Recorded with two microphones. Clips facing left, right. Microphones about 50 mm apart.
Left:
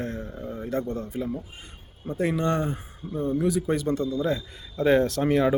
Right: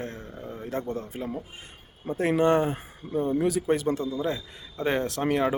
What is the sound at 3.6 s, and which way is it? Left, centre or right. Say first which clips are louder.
Speech: right 1 dB; right.